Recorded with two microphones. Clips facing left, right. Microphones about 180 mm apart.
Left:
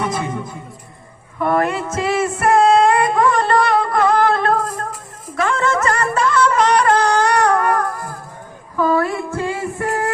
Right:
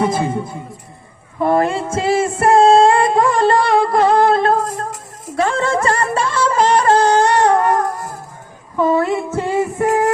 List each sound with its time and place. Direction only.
0.0 s a man's voice: 30° right (ahead or behind)
1.4 s female singing: 30° right (ahead or behind)
5.4 s music: 30° right (ahead or behind)
8.7 s female singing: 25° right (ahead or behind)